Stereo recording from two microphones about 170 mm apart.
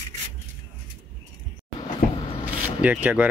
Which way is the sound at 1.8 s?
30° left (ahead or behind).